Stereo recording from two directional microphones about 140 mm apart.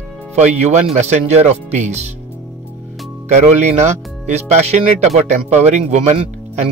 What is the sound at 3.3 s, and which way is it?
Speech, 55° right (ahead or behind).